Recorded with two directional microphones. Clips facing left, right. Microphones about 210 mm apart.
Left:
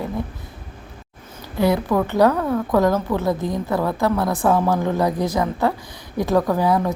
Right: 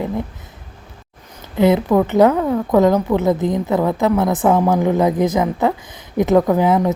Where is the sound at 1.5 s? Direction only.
20° right (ahead or behind).